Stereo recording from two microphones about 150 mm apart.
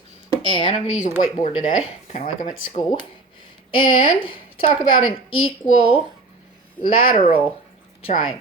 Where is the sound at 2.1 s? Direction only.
50° left (ahead or behind).